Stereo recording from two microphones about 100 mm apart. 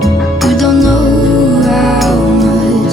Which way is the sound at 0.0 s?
Centre (ahead or behind).